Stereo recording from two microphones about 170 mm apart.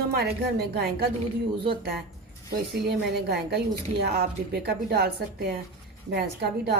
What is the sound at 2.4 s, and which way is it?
A woman's voice, 70° right (ahead or behind).